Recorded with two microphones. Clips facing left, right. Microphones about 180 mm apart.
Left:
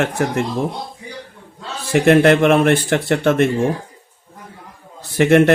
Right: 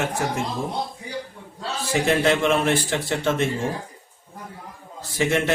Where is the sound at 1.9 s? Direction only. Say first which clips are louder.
Left 9 dB; 65° left (ahead or behind).